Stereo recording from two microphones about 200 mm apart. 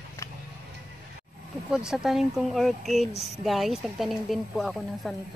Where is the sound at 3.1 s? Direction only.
30° left (ahead or behind).